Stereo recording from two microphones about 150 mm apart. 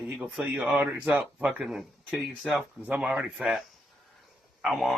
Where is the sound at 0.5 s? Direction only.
15° right (ahead or behind).